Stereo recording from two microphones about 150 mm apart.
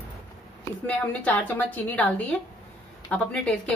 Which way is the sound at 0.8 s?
10° left (ahead or behind).